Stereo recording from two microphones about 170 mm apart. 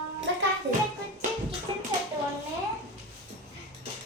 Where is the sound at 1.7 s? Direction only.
30° right (ahead or behind).